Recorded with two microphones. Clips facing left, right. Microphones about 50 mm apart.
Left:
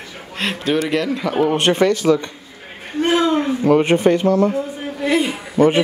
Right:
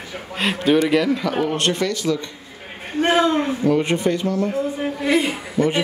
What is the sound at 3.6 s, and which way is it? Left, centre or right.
Speech, left.